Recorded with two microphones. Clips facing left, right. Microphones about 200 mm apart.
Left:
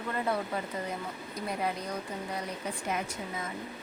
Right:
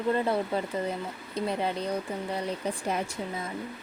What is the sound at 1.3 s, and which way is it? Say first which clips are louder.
Speech: right 5 dB; 25° right (ahead or behind).